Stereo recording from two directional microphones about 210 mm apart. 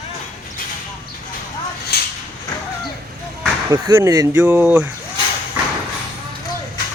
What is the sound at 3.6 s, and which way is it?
Speech, 15° right (ahead or behind).